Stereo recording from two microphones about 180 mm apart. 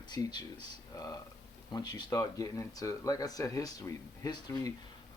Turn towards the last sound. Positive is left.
turn(degrees=20)  # may be behind; listen again after turning